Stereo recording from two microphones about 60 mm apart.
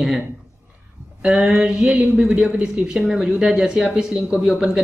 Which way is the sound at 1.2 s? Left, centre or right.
Centre.